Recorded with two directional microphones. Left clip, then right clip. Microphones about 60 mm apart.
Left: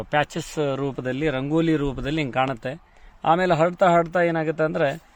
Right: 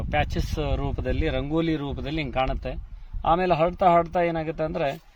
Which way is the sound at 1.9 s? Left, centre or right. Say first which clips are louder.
Left 3 dB; left.